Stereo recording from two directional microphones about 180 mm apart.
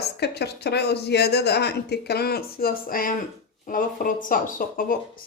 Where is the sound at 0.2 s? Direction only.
65° left (ahead or behind).